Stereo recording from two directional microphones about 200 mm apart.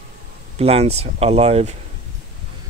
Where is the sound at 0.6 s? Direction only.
30° right (ahead or behind).